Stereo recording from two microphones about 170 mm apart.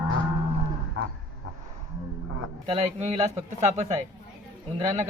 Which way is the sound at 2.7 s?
40° right (ahead or behind).